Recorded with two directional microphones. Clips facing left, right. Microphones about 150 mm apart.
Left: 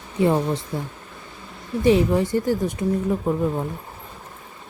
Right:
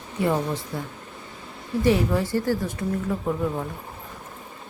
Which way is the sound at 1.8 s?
20° left (ahead or behind).